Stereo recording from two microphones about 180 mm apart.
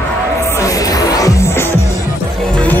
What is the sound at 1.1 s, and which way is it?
Music, 20° left (ahead or behind).